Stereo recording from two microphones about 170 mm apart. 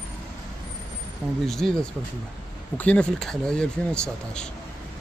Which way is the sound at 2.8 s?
5° left (ahead or behind).